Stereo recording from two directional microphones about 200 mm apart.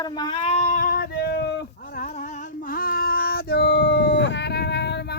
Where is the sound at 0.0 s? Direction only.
20° left (ahead or behind).